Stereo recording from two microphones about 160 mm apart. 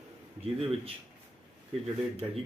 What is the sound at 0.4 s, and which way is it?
Speech, 40° right (ahead or behind).